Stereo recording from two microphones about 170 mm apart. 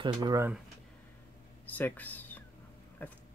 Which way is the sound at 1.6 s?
10° left (ahead or behind).